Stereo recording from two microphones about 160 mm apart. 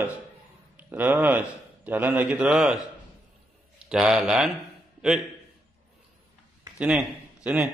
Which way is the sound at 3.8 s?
5° right (ahead or behind).